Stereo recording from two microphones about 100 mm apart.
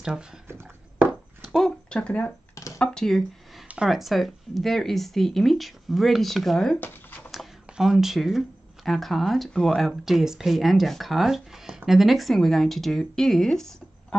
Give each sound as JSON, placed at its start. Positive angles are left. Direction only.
{"t": 0.0, "sound": "speech", "side_deg": -5}
{"t": 1.4, "sound": "speech", "side_deg": 5}
{"t": 3.6, "sound": "speech", "side_deg": -10}
{"t": 6.8, "sound": "a sound", "side_deg": 15}
{"t": 7.2, "sound": "speech", "side_deg": 0}